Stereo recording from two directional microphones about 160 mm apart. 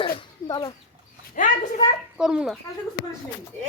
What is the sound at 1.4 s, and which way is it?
Speech, 55° left (ahead or behind).